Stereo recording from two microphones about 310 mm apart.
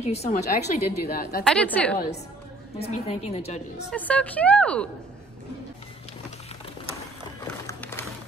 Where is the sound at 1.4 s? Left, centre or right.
Centre.